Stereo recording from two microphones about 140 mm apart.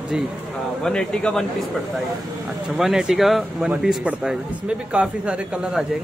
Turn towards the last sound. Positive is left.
turn(degrees=-5)  # may be behind; listen again after turning